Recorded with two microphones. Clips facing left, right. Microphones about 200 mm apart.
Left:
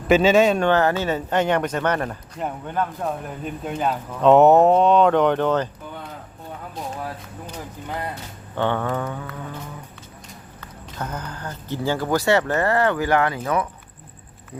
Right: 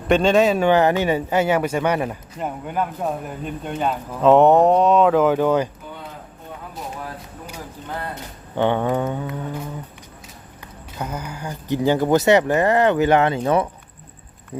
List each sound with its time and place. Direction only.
0.1 s speech: 5° left (ahead or behind)
0.7 s speech: 15° right (ahead or behind)
8.1 s speech: 15° right (ahead or behind)
10.9 s speech: 10° right (ahead or behind)